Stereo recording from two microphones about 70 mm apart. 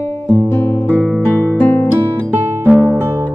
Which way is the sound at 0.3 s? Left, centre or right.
Left.